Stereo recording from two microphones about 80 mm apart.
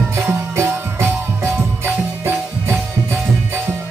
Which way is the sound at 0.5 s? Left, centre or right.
Right.